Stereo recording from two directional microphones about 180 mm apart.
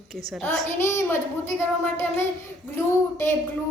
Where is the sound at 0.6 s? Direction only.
15° left (ahead or behind).